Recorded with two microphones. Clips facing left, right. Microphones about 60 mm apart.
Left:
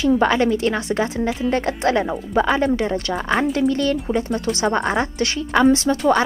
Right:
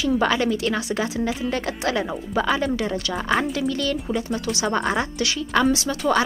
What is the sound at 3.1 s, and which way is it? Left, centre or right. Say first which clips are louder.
Speech: left 1 dB; centre.